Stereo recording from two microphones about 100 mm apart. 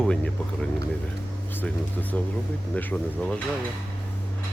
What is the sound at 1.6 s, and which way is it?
Speech, 15° left (ahead or behind).